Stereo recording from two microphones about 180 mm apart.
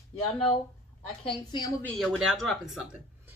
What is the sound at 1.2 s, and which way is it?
Speech, 25° left (ahead or behind).